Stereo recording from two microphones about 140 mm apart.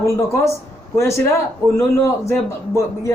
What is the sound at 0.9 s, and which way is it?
A man's voice, 20° left (ahead or behind).